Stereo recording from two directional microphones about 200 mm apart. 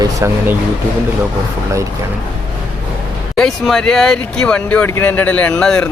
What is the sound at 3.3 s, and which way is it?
Speech, centre (ahead or behind).